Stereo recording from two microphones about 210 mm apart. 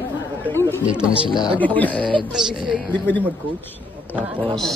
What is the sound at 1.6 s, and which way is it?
Speech, 5° left (ahead or behind).